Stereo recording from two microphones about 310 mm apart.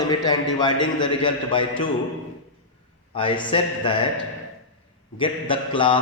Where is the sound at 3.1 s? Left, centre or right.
Centre.